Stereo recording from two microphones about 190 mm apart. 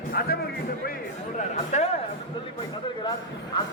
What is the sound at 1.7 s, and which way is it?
Speech, 35° left (ahead or behind).